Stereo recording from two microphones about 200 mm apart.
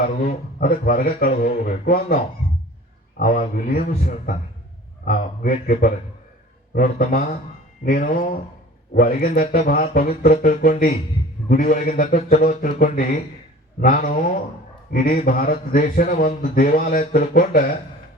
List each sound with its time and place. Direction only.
0.0 s a man's voice: 45° left (ahead or behind)